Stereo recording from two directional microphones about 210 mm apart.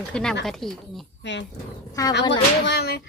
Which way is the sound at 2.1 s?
55° left (ahead or behind).